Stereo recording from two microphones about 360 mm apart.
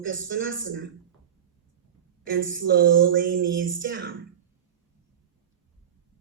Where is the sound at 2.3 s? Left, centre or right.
Right.